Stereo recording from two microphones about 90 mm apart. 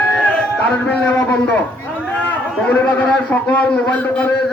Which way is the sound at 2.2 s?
15° left (ahead or behind).